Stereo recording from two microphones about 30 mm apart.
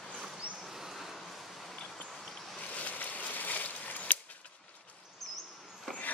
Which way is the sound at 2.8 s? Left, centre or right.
Left.